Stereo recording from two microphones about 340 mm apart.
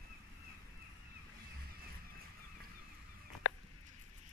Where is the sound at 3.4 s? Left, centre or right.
Left.